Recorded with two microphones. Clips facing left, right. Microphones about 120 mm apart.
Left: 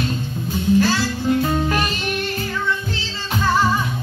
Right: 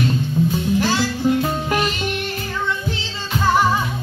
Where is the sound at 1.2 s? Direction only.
15° right (ahead or behind).